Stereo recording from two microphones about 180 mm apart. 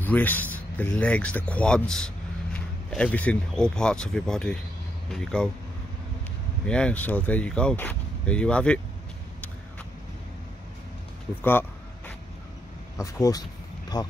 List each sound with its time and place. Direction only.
0.0 s speech: 10° left (ahead or behind)
6.6 s speech: 5° left (ahead or behind)
12.9 s speech: 20° left (ahead or behind)